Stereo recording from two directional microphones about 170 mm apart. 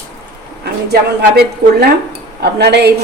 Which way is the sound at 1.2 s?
65° right (ahead or behind).